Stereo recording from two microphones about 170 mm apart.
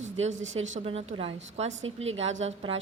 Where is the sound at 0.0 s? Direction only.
45° right (ahead or behind).